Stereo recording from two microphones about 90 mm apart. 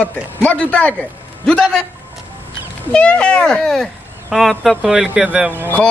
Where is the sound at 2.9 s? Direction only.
10° left (ahead or behind).